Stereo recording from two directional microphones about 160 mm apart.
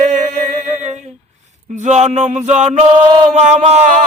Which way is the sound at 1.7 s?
50° right (ahead or behind).